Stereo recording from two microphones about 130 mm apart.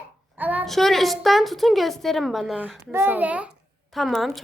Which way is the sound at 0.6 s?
Centre (ahead or behind).